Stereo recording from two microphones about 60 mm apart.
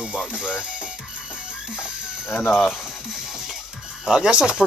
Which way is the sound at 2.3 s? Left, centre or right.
Left.